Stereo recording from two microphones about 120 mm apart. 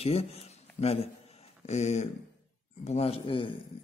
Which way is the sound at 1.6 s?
70° left (ahead or behind).